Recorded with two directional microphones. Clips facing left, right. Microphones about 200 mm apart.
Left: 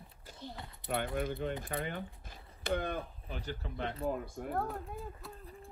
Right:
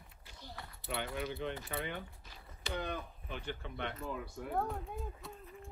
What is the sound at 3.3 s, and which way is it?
Speech, 40° left (ahead or behind).